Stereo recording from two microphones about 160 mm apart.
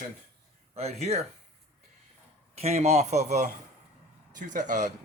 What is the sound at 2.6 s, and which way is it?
Speech, 45° right (ahead or behind).